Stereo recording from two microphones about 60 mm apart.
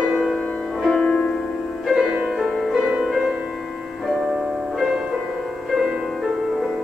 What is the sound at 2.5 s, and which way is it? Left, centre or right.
Music, centre.